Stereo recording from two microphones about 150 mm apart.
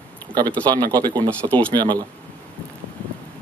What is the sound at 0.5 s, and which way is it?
Speech, 10° left (ahead or behind).